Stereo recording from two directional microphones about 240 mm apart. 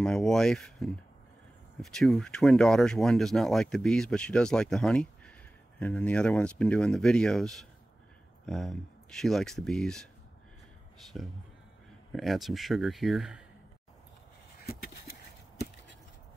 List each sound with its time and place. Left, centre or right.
0.0 s speech: centre
11.1 s speech: centre
14.6 s a sound: left